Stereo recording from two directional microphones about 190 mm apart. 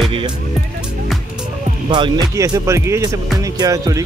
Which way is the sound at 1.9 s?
20° right (ahead or behind).